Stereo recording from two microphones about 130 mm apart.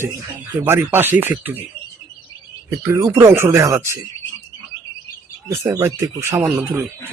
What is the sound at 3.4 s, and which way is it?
Speech, 20° right (ahead or behind).